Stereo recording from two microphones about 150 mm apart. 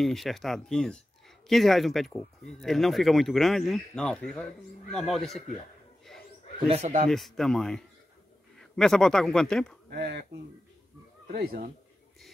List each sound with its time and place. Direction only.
0.0 s speech: centre (ahead or behind)
6.0 s a sound: centre (ahead or behind)
6.7 s speech: 55° right (ahead or behind)
7.1 s speech: centre (ahead or behind)
9.8 s speech: 90° right
11.3 s speech: 90° right